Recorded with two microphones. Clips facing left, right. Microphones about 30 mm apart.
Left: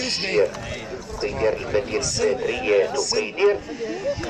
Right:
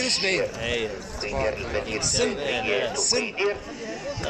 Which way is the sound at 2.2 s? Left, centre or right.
Right.